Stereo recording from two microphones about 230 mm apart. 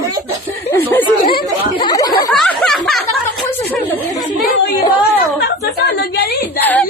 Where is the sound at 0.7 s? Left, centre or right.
Centre.